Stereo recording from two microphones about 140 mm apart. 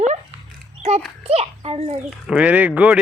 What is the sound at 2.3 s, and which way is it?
Speech, 10° right (ahead or behind).